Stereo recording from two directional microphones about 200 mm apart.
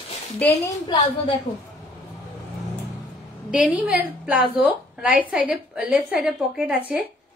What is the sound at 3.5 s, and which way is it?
A woman's voice, 5° right (ahead or behind).